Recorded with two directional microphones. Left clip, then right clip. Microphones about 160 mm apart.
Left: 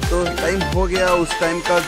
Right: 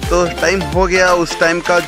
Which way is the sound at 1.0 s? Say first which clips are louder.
Right 5 dB; 20° right (ahead or behind).